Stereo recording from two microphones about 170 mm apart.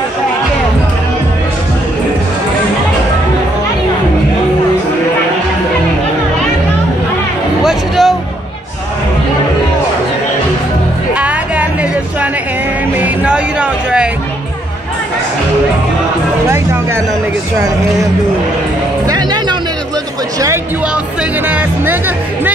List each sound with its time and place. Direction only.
7.6 s music: centre (ahead or behind)
11.1 s music: 10° right (ahead or behind)
16.4 s music: 15° right (ahead or behind)
19.0 s music: 25° right (ahead or behind)
20.3 s a sound: 20° right (ahead or behind)
20.9 s music: 5° right (ahead or behind)